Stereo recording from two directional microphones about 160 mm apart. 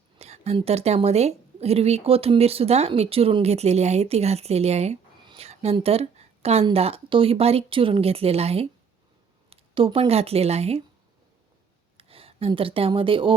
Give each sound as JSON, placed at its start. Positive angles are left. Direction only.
{"t": 0.2, "sound": "a woman's voice", "side_deg": -40}
{"t": 5.2, "sound": "a sound", "side_deg": -30}
{"t": 5.5, "sound": "a woman's voice", "side_deg": -40}
{"t": 11.9, "sound": "speech", "side_deg": -35}